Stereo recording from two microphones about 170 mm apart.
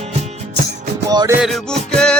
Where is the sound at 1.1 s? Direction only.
20° right (ahead or behind).